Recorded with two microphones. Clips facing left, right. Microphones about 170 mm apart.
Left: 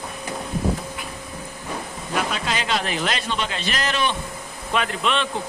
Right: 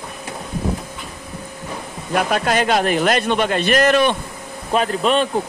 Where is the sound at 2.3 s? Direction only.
55° right (ahead or behind).